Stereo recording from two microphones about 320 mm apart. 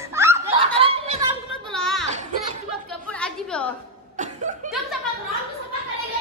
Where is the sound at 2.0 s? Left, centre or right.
Right.